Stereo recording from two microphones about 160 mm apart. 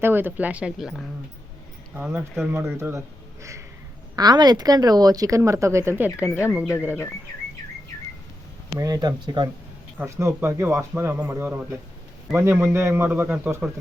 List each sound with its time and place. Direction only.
0.0 s a man's voice: 15° right (ahead or behind)
4.1 s speech: 25° right (ahead or behind); by 6.7 s 5° right (ahead or behind)
8.8 s a man's voice: 25° right (ahead or behind)